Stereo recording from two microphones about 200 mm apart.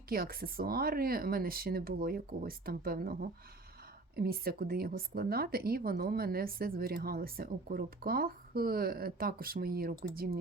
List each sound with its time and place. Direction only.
0.1 s speech: 50° right (ahead or behind)